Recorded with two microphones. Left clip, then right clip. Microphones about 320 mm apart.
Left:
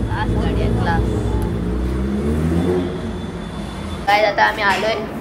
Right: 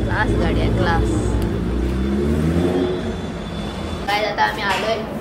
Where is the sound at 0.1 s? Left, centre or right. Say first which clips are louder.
Right 3 dB; centre.